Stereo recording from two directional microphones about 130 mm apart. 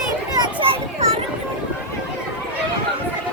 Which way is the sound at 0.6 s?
50° right (ahead or behind).